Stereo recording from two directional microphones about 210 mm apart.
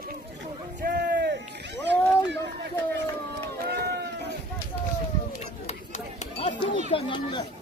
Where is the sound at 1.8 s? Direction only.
55° right (ahead or behind).